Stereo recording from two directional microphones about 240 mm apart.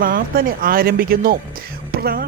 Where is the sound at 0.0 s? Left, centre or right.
Right.